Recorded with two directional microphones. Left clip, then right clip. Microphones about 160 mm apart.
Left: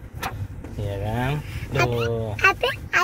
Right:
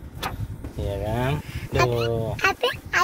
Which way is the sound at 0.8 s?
20° right (ahead or behind).